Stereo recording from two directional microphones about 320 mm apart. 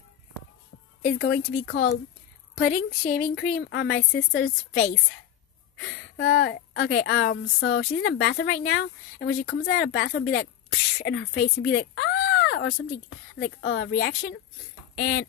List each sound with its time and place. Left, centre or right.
1.0 s a woman's voice: left